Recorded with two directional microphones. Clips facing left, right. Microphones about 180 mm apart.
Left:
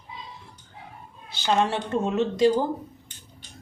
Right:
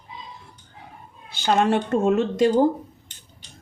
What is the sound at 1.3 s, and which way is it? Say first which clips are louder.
Speech: right 4 dB; 50° right (ahead or behind).